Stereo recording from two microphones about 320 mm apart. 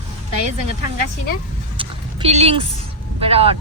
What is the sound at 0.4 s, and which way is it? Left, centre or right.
Speech, right.